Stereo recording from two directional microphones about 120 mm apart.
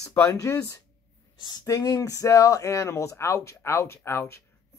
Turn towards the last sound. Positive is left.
turn(degrees=20)  # may be behind; listen again after turning